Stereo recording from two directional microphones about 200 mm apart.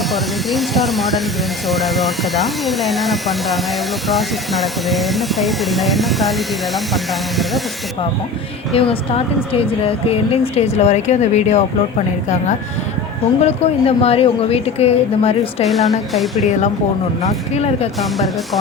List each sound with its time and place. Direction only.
0.1 s speech: centre (ahead or behind)
8.7 s speech: 30° left (ahead or behind)
13.4 s speech: 30° left (ahead or behind)
15.6 s speech: centre (ahead or behind)
17.2 s speech: 35° left (ahead or behind)
18.0 s speech: centre (ahead or behind)